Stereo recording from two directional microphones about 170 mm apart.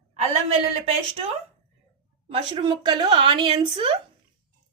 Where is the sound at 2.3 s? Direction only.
30° right (ahead or behind).